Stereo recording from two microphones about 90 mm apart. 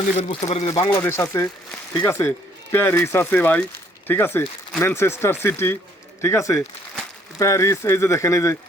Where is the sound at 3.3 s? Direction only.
15° left (ahead or behind).